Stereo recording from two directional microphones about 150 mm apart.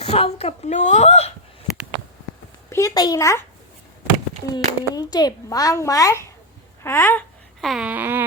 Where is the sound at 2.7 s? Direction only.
25° left (ahead or behind).